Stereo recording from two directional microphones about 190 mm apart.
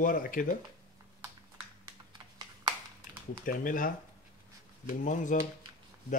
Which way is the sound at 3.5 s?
45° left (ahead or behind).